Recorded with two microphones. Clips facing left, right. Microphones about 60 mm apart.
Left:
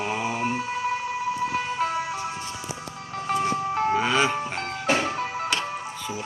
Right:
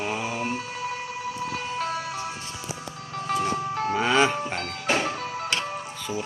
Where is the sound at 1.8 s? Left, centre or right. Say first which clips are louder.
Left 2 dB; left.